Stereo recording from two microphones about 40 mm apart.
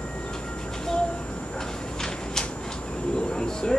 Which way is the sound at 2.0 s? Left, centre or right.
Centre.